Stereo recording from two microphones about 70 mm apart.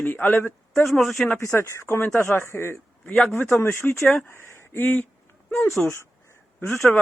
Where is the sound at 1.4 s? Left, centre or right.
Left.